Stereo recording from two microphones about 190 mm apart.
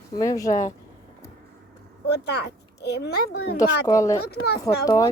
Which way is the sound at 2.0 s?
60° left (ahead or behind).